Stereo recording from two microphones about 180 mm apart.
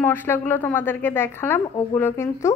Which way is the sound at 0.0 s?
10° left (ahead or behind).